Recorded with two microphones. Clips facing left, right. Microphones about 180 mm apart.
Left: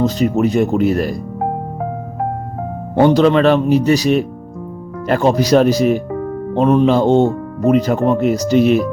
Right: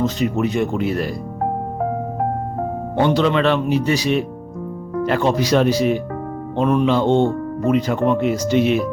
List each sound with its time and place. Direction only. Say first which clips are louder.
0.0 s speech: left 4 dB; 40° left (ahead or behind)
3.0 s speech: left 6 dB; 40° left (ahead or behind)